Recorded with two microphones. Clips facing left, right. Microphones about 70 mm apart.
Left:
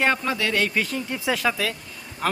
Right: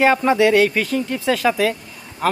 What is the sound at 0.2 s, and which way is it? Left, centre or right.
Speech, right.